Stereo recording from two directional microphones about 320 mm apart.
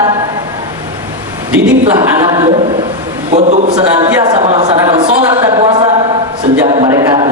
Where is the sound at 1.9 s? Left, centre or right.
Centre.